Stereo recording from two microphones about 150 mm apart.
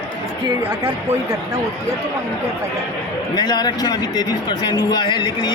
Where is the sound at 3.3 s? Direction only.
25° left (ahead or behind).